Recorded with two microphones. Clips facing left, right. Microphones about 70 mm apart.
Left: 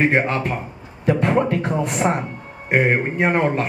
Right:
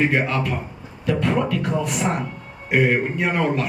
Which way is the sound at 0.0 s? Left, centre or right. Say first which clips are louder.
Left 2 dB; left.